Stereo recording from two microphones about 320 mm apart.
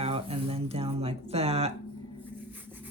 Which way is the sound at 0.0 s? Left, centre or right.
Centre.